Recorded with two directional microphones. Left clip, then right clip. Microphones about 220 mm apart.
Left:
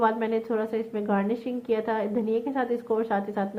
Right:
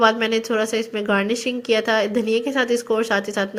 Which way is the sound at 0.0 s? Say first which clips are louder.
Right 7 dB; 20° right (ahead or behind).